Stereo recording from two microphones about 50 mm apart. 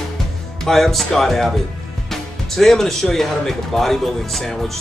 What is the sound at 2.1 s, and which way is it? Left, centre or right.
Speech, centre.